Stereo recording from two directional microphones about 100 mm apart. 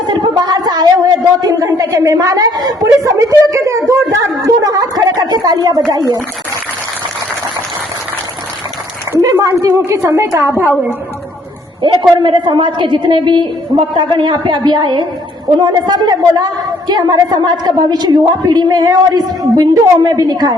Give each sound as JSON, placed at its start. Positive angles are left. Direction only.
{"t": 0.1, "sound": "speech", "side_deg": -45}
{"t": 9.1, "sound": "a woman's voice", "side_deg": -30}
{"t": 11.8, "sound": "a woman's voice", "side_deg": -50}